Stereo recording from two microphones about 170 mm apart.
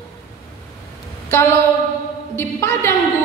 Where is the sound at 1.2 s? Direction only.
15° left (ahead or behind).